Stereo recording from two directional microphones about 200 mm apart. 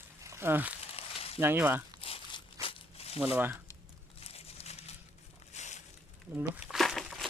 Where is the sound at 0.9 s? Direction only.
30° left (ahead or behind).